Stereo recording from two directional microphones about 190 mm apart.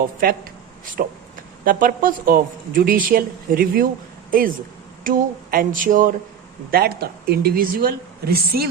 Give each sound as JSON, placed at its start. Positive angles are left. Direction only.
{"t": 1.6, "sound": "speech", "side_deg": -45}